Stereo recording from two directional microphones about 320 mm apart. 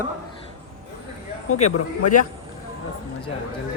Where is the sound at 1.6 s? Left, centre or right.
Left.